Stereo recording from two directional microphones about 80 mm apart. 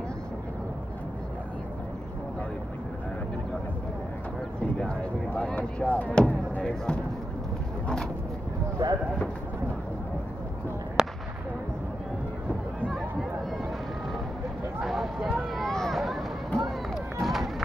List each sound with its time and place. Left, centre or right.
4.7 s speech: centre
8.8 s speech: right
11.0 s fireworks: centre
14.8 s a sound: centre
17.2 s run: centre